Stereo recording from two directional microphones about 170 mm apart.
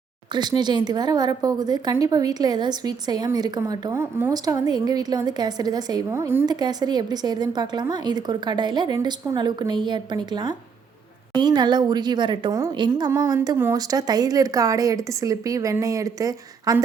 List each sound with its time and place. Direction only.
0.3 s a woman's voice: 25° right (ahead or behind)